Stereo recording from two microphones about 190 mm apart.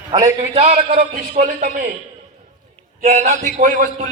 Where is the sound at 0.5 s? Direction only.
35° right (ahead or behind).